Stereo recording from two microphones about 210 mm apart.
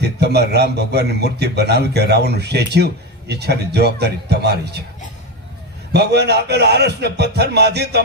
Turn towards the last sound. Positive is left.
turn(degrees=-50)  # may be behind; listen again after turning